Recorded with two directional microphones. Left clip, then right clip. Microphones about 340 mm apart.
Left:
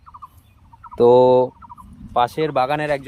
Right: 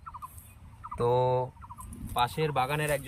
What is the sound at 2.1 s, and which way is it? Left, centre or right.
Speech, centre.